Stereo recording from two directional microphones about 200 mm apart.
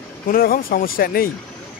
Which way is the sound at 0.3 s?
45° left (ahead or behind).